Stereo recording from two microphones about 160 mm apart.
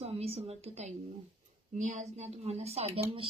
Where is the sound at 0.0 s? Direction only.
40° right (ahead or behind).